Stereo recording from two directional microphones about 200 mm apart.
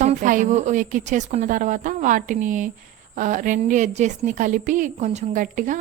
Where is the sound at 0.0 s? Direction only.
40° right (ahead or behind).